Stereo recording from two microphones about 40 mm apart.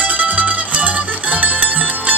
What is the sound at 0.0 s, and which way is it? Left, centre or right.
Music, right.